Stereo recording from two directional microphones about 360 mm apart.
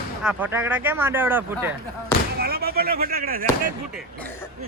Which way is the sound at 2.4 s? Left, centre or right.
Right.